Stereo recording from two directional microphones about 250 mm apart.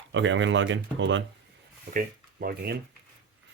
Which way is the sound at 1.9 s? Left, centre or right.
Right.